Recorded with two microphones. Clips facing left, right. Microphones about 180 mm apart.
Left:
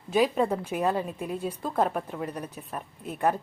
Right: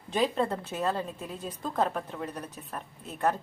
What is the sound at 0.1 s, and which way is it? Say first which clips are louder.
A woman's voice: left 4 dB; 10° left (ahead or behind).